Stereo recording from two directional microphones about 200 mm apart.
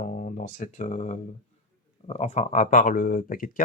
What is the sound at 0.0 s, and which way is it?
Speech, 40° left (ahead or behind).